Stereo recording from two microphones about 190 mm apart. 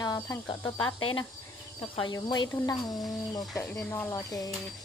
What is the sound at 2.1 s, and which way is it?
Speech, 20° left (ahead or behind).